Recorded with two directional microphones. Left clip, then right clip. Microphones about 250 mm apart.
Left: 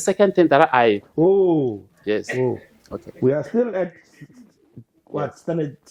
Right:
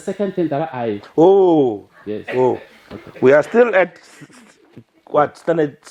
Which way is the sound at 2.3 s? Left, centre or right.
Right.